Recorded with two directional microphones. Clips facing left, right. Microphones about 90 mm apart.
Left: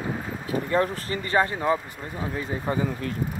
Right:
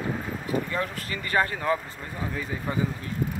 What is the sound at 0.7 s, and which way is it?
Speech, 40° left (ahead or behind).